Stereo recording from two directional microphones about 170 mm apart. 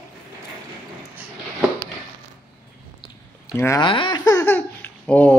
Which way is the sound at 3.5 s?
15° left (ahead or behind).